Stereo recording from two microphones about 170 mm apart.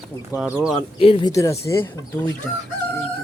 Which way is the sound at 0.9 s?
30° left (ahead or behind).